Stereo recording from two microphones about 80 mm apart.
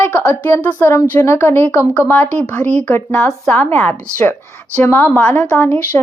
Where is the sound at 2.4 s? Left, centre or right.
Centre.